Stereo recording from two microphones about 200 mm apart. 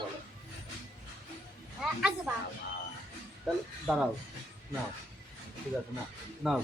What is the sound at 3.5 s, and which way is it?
Speech, centre (ahead or behind).